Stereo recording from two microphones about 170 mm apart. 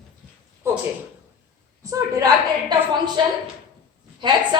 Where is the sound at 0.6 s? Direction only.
15° right (ahead or behind).